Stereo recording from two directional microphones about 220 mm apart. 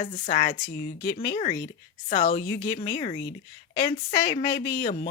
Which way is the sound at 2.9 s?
20° left (ahead or behind).